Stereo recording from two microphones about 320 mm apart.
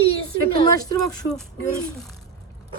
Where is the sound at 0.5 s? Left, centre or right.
Centre.